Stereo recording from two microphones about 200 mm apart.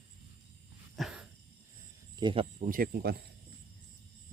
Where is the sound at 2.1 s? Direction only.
25° right (ahead or behind).